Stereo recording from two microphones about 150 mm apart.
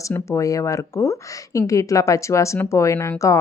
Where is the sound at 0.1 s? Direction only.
20° left (ahead or behind).